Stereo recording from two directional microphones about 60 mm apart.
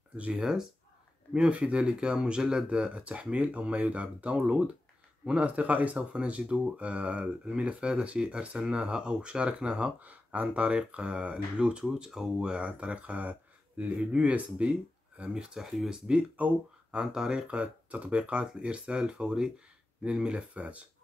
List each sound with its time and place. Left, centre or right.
0.2 s speech: centre
16.9 s speech: centre
17.5 s speech: right